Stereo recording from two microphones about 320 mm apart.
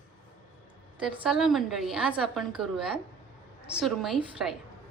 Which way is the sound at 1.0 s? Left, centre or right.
Centre.